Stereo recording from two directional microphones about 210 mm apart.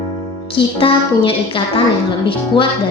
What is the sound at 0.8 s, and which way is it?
Speech, 25° left (ahead or behind).